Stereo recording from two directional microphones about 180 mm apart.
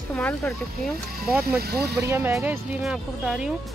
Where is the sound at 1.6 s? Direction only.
65° right (ahead or behind).